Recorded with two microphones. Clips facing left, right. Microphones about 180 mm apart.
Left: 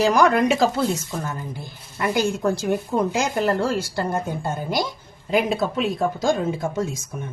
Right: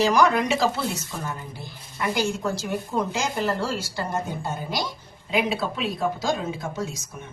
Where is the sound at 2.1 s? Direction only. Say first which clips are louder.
Left 5 dB; 55° left (ahead or behind).